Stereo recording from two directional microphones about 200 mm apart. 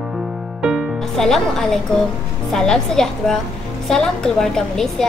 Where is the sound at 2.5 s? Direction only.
Centre (ahead or behind).